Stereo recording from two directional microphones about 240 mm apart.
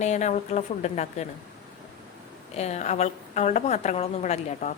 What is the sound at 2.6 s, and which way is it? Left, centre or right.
A woman's voice, left.